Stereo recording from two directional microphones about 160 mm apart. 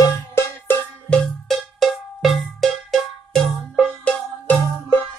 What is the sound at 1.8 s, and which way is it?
Cowbell, centre (ahead or behind).